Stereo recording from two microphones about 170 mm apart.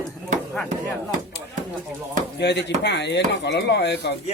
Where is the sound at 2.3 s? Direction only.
85° left.